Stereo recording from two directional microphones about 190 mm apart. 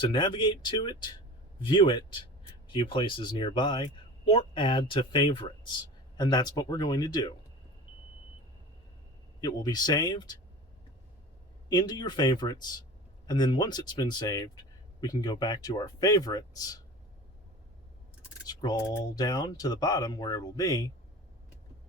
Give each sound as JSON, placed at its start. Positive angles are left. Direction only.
{"t": 0.1, "sound": "speech", "side_deg": 25}
{"t": 9.4, "sound": "speech", "side_deg": 20}
{"t": 11.7, "sound": "speech", "side_deg": 20}
{"t": 18.4, "sound": "speech", "side_deg": 20}